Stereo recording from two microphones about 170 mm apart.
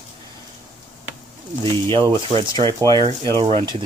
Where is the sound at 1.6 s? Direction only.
30° right (ahead or behind).